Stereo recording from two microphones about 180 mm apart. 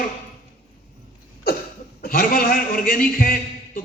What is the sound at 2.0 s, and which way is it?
A man's voice, 55° left (ahead or behind).